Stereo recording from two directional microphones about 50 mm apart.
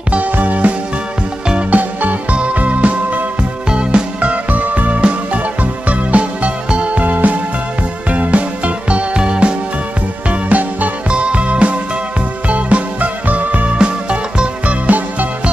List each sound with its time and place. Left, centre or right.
0.1 s music: right
14.9 s music: right